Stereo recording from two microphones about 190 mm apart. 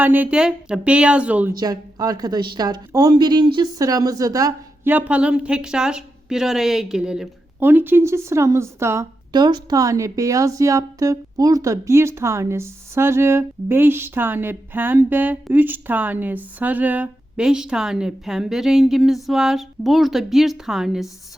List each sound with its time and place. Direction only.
0.0 s a woman's voice: 10° right (ahead or behind)
1.5 s a woman's voice: 20° right (ahead or behind); by 21.1 s centre (ahead or behind)